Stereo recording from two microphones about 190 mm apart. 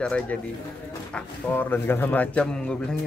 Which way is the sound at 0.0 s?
5° left (ahead or behind).